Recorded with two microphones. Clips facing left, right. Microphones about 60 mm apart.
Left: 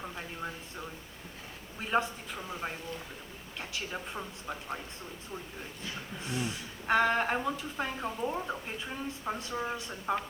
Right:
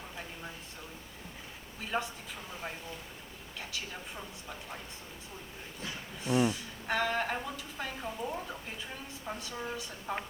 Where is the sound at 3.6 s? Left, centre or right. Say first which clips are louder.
Left 4 dB; left.